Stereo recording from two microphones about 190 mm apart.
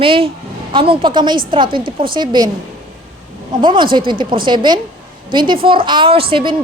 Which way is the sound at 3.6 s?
25° right (ahead or behind).